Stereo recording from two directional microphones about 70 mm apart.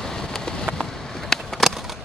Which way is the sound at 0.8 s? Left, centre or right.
Centre.